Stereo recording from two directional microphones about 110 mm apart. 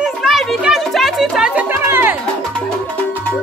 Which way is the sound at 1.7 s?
25° right (ahead or behind).